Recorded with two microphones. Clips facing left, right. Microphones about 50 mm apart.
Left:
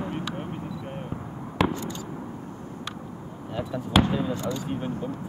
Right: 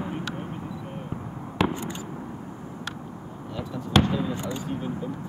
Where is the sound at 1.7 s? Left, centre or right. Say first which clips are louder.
Even; right.